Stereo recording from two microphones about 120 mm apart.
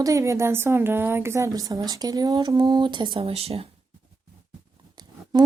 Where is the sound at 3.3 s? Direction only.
60° right (ahead or behind).